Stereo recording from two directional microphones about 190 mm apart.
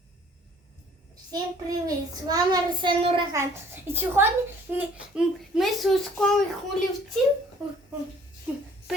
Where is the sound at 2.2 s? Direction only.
20° right (ahead or behind).